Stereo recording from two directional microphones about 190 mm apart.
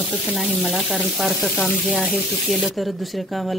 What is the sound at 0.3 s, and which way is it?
Speech, centre (ahead or behind).